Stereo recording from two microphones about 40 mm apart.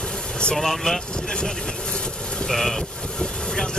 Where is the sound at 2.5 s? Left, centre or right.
Centre.